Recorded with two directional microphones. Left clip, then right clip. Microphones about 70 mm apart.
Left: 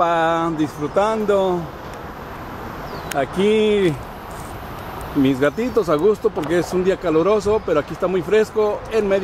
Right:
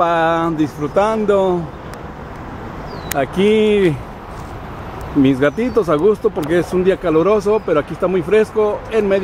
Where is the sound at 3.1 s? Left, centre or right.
Centre.